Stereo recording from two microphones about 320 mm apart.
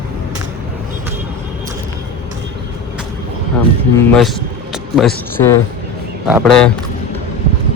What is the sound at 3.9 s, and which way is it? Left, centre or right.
Speech, centre.